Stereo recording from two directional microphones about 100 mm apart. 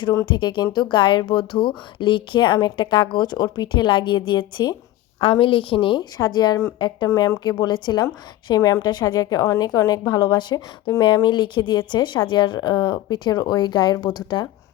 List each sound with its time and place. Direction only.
0.3 s speech: 50° left (ahead or behind)
5.2 s a woman's voice: 65° left (ahead or behind)
6.1 s a woman's voice: 45° left (ahead or behind)